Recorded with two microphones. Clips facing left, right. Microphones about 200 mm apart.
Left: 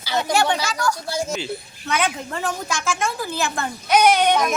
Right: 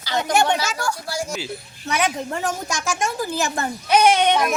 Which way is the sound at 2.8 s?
15° right (ahead or behind).